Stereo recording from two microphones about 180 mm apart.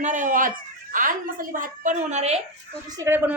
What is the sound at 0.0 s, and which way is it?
A woman's voice, 45° right (ahead or behind).